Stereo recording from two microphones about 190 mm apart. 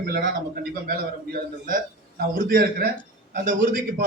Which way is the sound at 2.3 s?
50° right (ahead or behind).